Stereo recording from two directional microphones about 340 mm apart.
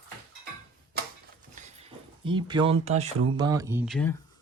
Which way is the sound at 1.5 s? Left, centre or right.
Centre.